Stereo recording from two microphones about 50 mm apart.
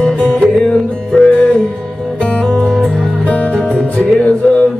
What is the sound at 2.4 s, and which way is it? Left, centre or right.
Music, centre.